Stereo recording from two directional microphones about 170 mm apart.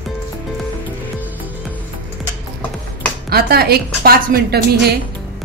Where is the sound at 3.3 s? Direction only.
65° right (ahead or behind).